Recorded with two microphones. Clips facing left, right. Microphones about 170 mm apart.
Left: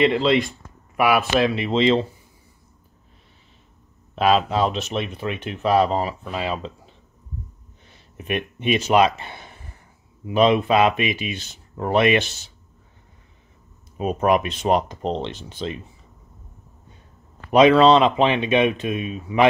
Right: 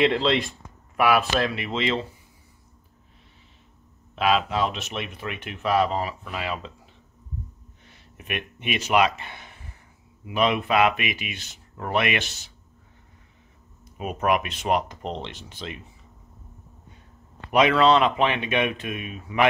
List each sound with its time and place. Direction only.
0.0 s speech: 5° left (ahead or behind)
1.4 s speech: 25° left (ahead or behind)
4.1 s speech: 35° left (ahead or behind)
7.9 s speech: 30° left (ahead or behind)
13.9 s speech: 30° left (ahead or behind)
17.5 s speech: 30° left (ahead or behind)